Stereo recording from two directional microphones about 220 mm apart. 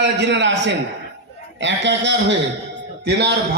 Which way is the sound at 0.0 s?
50° right (ahead or behind).